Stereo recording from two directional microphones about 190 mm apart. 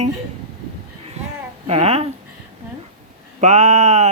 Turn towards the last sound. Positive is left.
turn(degrees=-35)  # may be behind; listen again after turning